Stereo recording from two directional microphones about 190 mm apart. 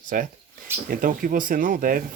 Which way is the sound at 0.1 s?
45° right (ahead or behind).